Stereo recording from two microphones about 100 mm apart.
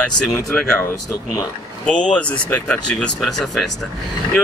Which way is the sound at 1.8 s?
10° left (ahead or behind).